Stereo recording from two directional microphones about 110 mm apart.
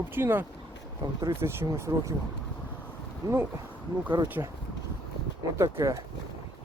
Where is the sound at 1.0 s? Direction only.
40° right (ahead or behind).